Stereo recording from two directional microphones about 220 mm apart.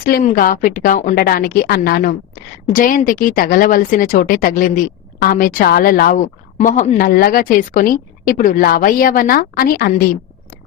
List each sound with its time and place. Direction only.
0.0 s speech: 40° left (ahead or behind)